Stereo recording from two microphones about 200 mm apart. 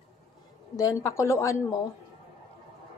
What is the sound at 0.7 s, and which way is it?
Speech, 15° left (ahead or behind).